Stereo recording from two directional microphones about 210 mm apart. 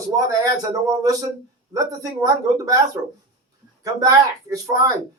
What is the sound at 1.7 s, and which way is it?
Speech, 15° right (ahead or behind).